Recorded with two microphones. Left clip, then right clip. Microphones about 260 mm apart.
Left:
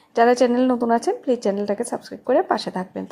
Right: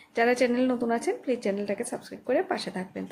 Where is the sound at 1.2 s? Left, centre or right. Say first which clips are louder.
Left 7 dB; centre.